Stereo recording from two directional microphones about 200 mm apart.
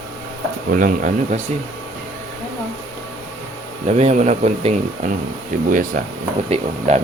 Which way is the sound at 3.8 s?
35° right (ahead or behind).